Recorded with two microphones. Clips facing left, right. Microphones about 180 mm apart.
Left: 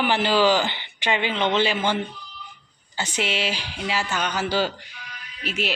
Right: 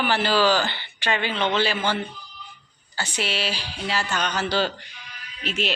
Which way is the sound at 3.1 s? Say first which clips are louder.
Left 2 dB; 20° left (ahead or behind).